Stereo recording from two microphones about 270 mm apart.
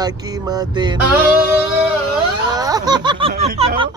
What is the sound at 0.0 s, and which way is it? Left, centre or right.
Speech, centre.